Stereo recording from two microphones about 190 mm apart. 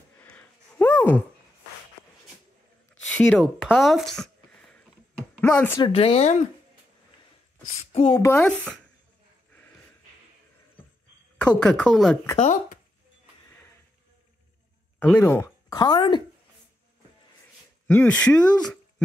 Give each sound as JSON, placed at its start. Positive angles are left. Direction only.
{"t": 0.2, "sound": "a sound", "side_deg": 10}
{"t": 3.2, "sound": "speech", "side_deg": 5}
{"t": 5.8, "sound": "speech", "side_deg": 30}
{"t": 7.6, "sound": "a sound", "side_deg": 35}
{"t": 8.1, "sound": "speech", "side_deg": 15}
{"t": 8.4, "sound": "speech", "side_deg": 5}
{"t": 11.4, "sound": "speech", "side_deg": 5}
{"t": 12.4, "sound": "speech", "side_deg": 40}
{"t": 15.0, "sound": "speech", "side_deg": 10}
{"t": 17.8, "sound": "speech", "side_deg": 10}